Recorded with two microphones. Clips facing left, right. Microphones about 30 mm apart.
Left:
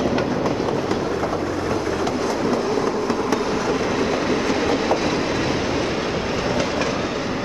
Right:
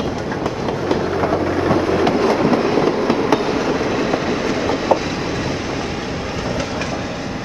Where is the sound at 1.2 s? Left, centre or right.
Right; by 6.9 s centre.